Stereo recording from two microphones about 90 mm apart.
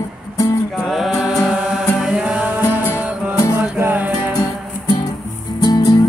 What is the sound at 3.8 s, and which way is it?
Music, 20° right (ahead or behind).